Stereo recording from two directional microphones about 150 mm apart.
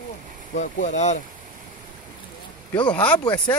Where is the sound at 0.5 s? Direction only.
55° left (ahead or behind).